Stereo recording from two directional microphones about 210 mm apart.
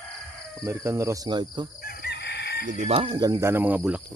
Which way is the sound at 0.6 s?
15° right (ahead or behind).